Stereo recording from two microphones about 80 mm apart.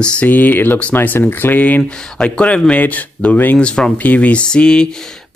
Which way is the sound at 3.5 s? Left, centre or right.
Centre.